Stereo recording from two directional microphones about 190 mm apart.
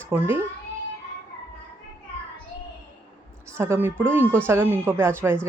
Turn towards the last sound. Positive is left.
turn(degrees=-10)  # may be behind; listen again after turning